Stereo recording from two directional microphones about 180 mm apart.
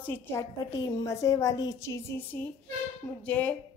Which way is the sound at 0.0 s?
10° left (ahead or behind).